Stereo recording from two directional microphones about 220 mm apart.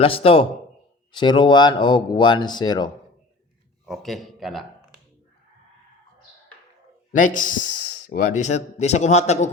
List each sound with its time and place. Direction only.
0.0 s speech: 25° left (ahead or behind)
3.8 s speech: centre (ahead or behind)
7.1 s speech: 35° left (ahead or behind)